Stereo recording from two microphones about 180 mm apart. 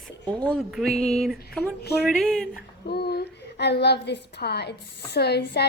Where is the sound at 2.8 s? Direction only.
60° left (ahead or behind).